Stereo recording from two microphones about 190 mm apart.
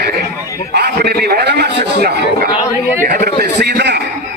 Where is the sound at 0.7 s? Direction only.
60° right (ahead or behind).